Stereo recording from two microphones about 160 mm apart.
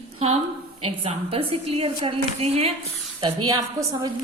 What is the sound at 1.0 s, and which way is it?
A woman's voice, 35° right (ahead or behind).